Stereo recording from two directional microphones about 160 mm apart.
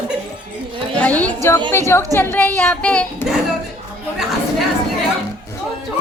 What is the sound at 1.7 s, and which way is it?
Speech, 15° left (ahead or behind).